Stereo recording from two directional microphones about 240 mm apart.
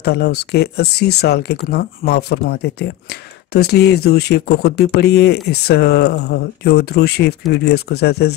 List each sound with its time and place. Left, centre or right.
0.0 s speech: left